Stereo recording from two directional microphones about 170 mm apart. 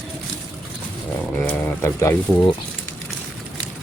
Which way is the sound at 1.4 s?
15° left (ahead or behind).